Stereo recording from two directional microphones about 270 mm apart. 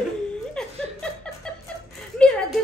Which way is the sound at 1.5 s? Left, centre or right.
Centre.